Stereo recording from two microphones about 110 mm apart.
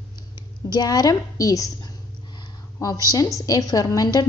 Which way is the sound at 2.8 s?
35° left (ahead or behind).